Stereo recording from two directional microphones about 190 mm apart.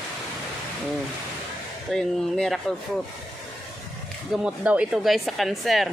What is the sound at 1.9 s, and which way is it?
Speech, centre (ahead or behind).